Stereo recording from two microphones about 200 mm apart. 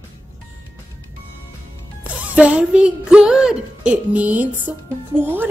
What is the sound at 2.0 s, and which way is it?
A woman's voice, 5° right (ahead or behind).